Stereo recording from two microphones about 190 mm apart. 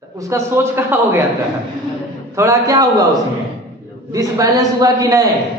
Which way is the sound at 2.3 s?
15° right (ahead or behind).